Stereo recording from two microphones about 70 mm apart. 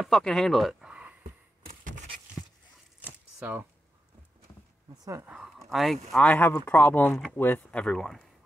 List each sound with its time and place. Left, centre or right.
0.0 s speech: centre
0.8 s a sound: centre
3.0 s shuffling cards: right
5.6 s speech: centre
6.2 s speech: left
7.7 s speech: centre